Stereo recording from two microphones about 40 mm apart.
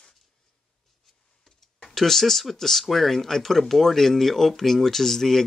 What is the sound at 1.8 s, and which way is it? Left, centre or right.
Speech, centre.